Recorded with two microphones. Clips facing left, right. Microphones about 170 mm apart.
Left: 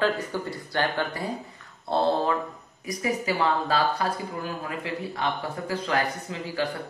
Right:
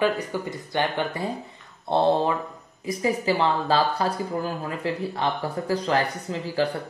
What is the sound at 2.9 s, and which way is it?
Speech, 30° right (ahead or behind).